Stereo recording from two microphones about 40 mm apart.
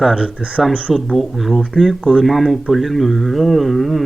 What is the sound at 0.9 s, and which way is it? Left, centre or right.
Speech, centre.